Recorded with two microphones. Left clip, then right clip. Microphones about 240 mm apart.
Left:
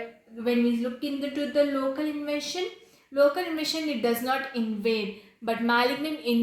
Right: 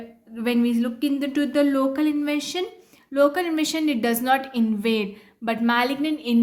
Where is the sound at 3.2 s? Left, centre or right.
Right.